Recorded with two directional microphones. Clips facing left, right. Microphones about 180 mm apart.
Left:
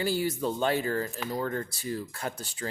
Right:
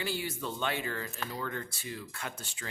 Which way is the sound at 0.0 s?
40° left (ahead or behind).